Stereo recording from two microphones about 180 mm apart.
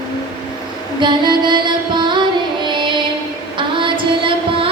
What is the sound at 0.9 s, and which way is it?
Music, 25° right (ahead or behind).